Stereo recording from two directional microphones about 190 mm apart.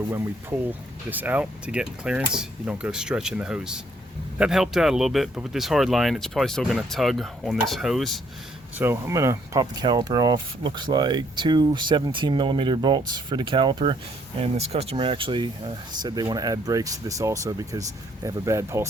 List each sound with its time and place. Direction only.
0.7 s speech: 10° right (ahead or behind)
8.8 s speech: 15° right (ahead or behind)